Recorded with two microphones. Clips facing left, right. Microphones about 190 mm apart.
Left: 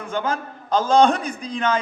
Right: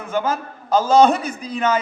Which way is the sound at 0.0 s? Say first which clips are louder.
Right 3 dB; 5° right (ahead or behind).